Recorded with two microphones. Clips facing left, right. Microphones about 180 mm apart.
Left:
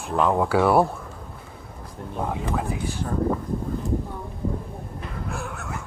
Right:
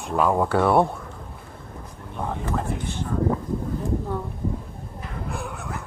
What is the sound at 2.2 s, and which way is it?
Speech, 5° left (ahead or behind).